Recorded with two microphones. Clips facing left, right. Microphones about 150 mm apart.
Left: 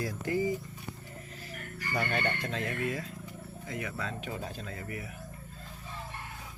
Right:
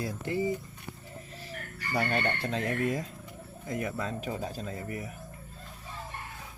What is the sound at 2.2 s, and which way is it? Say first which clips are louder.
Speech: right 3 dB; 35° right (ahead or behind).